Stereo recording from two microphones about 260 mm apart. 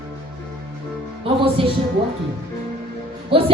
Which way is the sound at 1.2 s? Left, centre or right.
Right.